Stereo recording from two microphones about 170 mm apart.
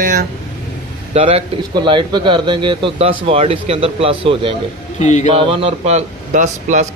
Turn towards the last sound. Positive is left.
turn(degrees=-45)  # may be behind; listen again after turning